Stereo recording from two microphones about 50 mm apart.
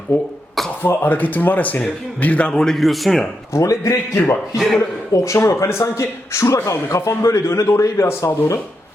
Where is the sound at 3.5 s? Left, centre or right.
Left.